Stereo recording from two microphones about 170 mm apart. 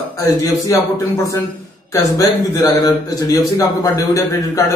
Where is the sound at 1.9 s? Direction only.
20° left (ahead or behind).